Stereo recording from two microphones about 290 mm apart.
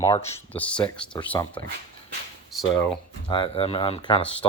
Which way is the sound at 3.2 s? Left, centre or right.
Centre.